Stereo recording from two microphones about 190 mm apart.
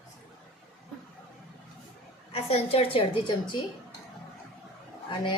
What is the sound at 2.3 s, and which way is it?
A woman's voice, 30° left (ahead or behind).